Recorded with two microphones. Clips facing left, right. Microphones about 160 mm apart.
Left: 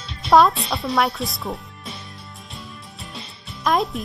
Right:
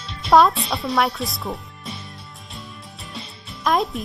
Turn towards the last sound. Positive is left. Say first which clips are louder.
# even
turn(degrees=0)  # may be behind; listen again after turning